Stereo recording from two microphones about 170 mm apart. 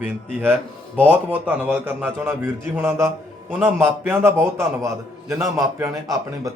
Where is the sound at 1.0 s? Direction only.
10° right (ahead or behind).